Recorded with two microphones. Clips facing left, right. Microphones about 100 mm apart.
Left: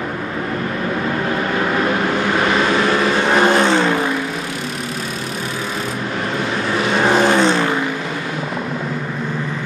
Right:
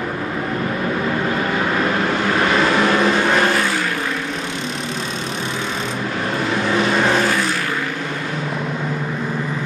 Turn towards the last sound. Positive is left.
turn(degrees=25)  # may be behind; listen again after turning